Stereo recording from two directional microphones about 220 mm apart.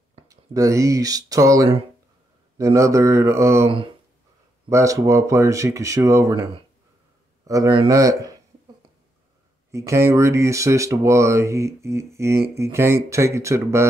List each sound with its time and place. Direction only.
0.3 s speech: 15° right (ahead or behind)
9.7 s speech: 15° right (ahead or behind)